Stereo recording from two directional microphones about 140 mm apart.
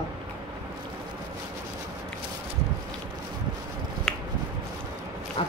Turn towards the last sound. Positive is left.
turn(degrees=40)  # may be behind; listen again after turning